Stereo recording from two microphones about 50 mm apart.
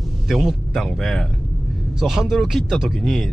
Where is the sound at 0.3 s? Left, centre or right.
Centre.